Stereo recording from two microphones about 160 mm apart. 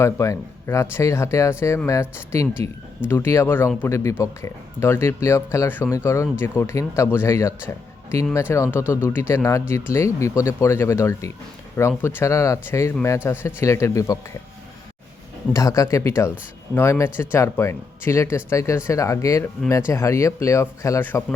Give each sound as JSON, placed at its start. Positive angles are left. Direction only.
{"t": 0.0, "sound": "speech", "side_deg": 20}
{"t": 15.5, "sound": "speech", "side_deg": 20}